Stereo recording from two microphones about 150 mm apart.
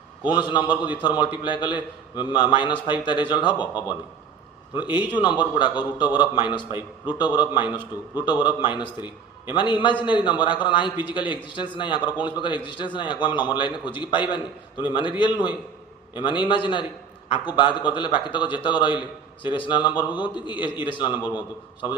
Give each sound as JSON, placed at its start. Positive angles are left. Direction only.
{"t": 0.3, "sound": "a man's voice", "side_deg": 30}
{"t": 4.7, "sound": "a man's voice", "side_deg": 30}
{"t": 21.1, "sound": "a man's voice", "side_deg": -10}